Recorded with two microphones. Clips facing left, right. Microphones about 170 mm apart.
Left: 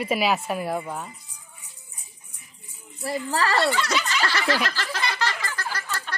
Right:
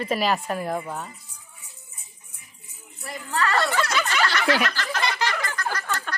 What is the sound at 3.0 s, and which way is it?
Speech, 35° left (ahead or behind).